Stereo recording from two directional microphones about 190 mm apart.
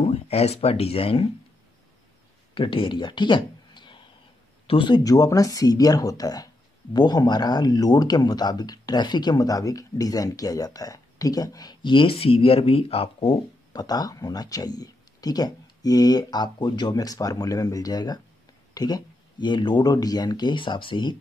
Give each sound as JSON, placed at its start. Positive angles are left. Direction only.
{"t": 0.0, "sound": "speech", "side_deg": 35}
{"t": 2.5, "sound": "speech", "side_deg": 25}